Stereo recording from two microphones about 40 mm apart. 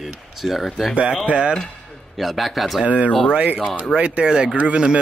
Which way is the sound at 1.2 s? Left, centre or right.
Right.